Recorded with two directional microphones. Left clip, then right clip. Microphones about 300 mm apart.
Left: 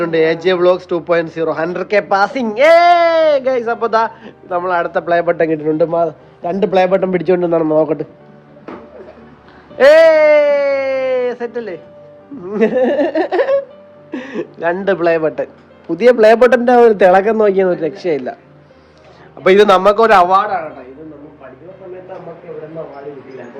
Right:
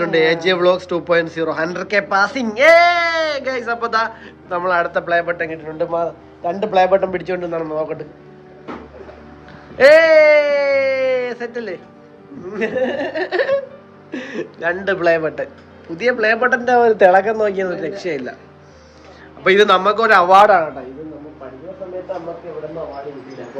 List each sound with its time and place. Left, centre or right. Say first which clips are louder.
0.0 s a man's voice: left 2 dB; centre
6.5 s a man's voice: left 2 dB; left
7.1 s speech: left 8 dB; centre
9.7 s a sound: left 2 dB; centre
12.5 s a man's voice: left 7 dB; centre
16.7 s a man's voice: even; left
17.4 s speech: left 6 dB; centre
19.4 s a man's voice: left 3 dB; centre